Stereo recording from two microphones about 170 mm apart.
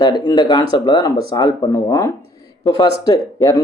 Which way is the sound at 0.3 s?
25° left (ahead or behind).